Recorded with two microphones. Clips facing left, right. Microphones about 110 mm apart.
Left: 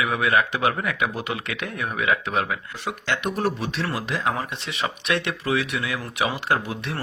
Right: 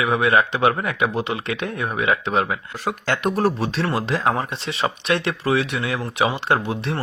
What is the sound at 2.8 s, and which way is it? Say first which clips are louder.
Speech: right 4 dB; 40° right (ahead or behind).